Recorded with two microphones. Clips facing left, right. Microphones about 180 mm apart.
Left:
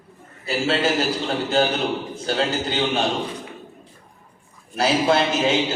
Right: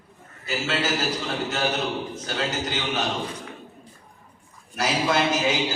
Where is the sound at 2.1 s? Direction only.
30° left (ahead or behind).